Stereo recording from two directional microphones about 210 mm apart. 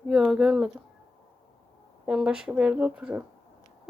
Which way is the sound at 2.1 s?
5° right (ahead or behind).